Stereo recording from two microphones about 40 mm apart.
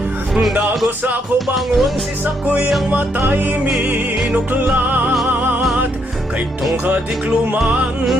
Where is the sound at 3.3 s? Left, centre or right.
Right.